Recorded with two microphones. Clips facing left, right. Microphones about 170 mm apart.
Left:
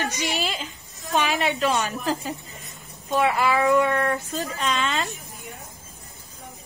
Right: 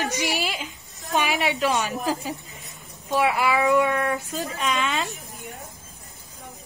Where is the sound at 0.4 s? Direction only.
15° right (ahead or behind).